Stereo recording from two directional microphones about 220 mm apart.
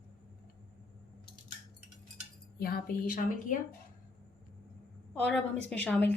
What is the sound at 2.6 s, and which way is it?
A woman's voice, 45° left (ahead or behind).